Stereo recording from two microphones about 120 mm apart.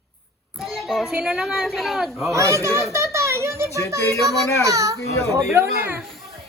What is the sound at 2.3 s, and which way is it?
A child's voice, 25° right (ahead or behind).